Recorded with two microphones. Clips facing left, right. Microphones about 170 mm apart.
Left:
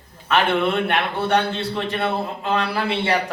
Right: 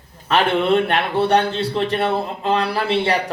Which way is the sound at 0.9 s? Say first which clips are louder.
Right 3 dB; 35° right (ahead or behind).